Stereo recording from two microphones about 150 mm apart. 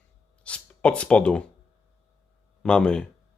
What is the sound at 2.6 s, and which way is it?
Speech, 5° left (ahead or behind).